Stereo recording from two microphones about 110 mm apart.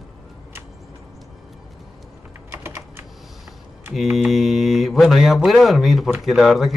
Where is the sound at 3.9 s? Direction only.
Centre (ahead or behind).